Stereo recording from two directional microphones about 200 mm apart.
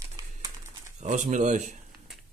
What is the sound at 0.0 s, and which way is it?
Crumpling, 15° right (ahead or behind).